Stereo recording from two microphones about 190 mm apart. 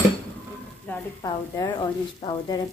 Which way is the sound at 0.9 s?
10° left (ahead or behind).